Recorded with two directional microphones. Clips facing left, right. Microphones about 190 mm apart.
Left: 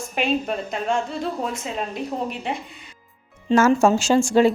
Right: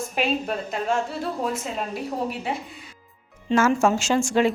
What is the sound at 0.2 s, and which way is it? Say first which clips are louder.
A woman's voice: left 2 dB; 5° right (ahead or behind).